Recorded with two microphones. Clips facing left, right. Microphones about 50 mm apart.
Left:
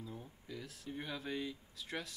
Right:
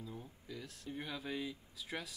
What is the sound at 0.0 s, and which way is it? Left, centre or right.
Speech, centre.